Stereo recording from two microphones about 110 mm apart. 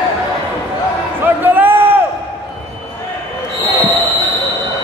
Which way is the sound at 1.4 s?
20° right (ahead or behind).